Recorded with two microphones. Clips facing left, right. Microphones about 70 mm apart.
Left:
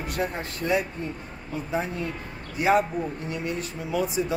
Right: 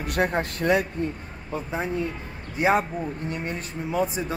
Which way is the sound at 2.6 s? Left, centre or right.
Right.